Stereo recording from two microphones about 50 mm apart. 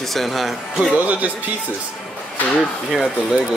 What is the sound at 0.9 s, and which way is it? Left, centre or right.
Speech, right.